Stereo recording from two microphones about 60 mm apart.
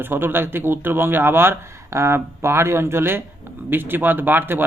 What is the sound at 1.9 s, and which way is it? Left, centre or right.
A man's voice, right.